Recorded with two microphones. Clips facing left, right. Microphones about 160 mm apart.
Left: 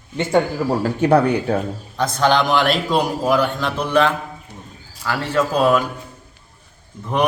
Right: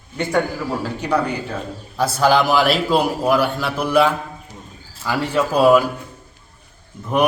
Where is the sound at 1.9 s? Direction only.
5° right (ahead or behind).